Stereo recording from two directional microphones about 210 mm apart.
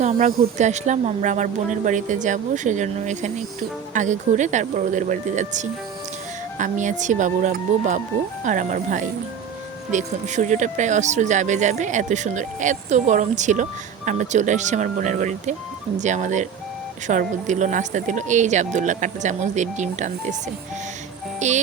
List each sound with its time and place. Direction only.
0.0 s speech: 35° right (ahead or behind)
21.3 s music: 35° right (ahead or behind)